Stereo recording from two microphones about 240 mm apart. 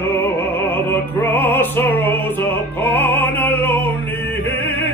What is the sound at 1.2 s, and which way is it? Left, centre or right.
Music, centre.